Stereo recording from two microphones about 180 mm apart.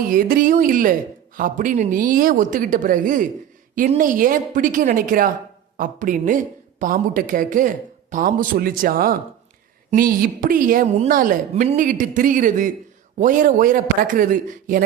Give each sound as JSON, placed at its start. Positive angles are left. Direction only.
{"t": 0.1, "sound": "a woman's voice", "side_deg": -50}